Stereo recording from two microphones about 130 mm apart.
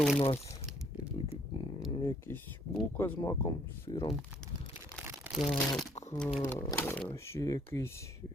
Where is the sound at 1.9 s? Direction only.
40° left (ahead or behind).